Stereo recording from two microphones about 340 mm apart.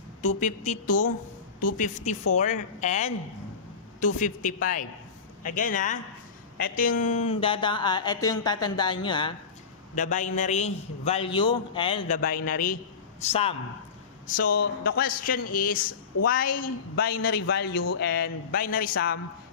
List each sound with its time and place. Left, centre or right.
0.4 s a man's voice: left